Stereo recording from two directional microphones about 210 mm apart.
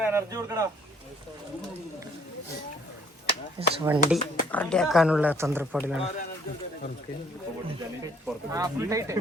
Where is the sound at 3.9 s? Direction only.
10° right (ahead or behind).